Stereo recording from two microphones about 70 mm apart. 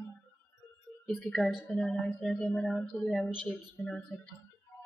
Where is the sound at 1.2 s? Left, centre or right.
Centre.